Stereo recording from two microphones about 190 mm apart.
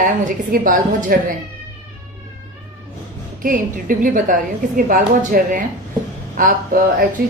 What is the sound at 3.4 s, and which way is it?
A woman's voice, 45° right (ahead or behind).